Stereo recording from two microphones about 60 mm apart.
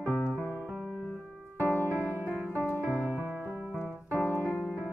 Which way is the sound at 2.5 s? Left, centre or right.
Left.